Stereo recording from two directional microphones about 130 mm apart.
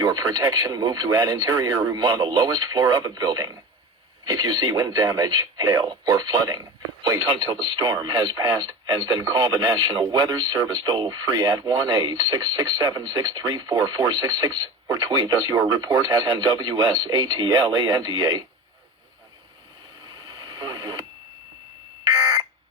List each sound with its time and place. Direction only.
0.0 s speech: 30° right (ahead or behind)
20.1 s radio: 30° right (ahead or behind)